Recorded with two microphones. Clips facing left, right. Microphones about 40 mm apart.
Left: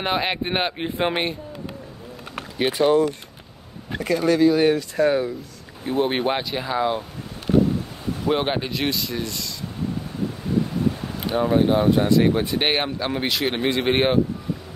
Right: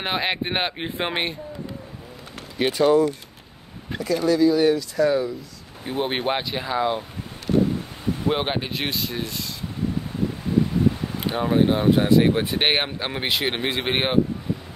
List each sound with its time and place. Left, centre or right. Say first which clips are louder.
0.0 s speech: left 1 dB; centre
2.9 s speech: even; left
5.9 s speech: left 3 dB; centre
8.3 s speech: left 2 dB; centre
8.6 s speech: left 2 dB; right
11.1 s speech: left 3 dB; centre